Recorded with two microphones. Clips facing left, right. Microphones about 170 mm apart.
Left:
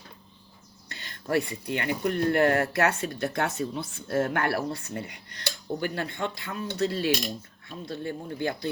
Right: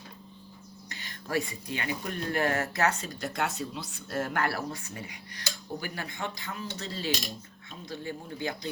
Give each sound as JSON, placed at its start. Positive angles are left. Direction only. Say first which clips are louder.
{"t": 0.9, "sound": "speech", "louder": "left 4 dB", "side_deg": 65}
{"t": 4.5, "sound": "speech", "louder": "left 5 dB", "side_deg": 35}
{"t": 4.9, "sound": "speech", "louder": "left 5 dB", "side_deg": 60}